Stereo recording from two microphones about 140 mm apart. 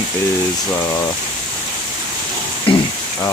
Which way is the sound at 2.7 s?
40° left (ahead or behind).